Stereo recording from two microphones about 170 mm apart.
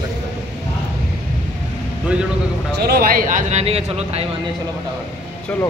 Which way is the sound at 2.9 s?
60° right (ahead or behind).